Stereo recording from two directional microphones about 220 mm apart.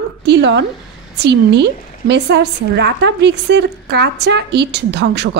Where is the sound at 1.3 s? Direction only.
50° right (ahead or behind).